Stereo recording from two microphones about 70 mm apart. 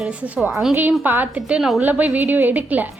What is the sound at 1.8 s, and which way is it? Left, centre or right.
A woman's voice, right.